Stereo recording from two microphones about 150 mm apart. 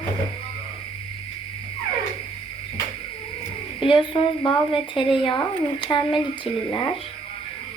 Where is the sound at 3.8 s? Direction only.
35° left (ahead or behind).